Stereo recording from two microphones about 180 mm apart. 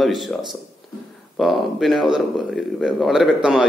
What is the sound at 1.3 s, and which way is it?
A man's voice, centre (ahead or behind).